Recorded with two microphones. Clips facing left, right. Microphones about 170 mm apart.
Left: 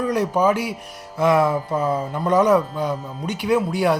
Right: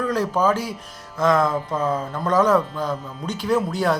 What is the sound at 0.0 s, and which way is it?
Speech, 15° left (ahead or behind).